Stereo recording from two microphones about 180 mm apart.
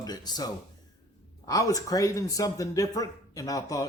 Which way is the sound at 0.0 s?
20° left (ahead or behind).